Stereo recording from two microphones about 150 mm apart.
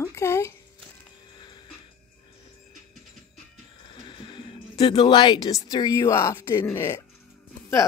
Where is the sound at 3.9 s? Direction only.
35° left (ahead or behind).